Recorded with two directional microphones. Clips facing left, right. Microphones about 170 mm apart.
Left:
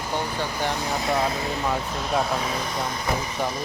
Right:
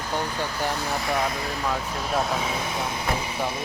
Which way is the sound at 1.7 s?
Centre (ahead or behind).